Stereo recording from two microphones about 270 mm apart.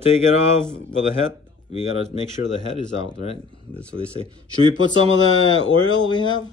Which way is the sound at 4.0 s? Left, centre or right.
Centre.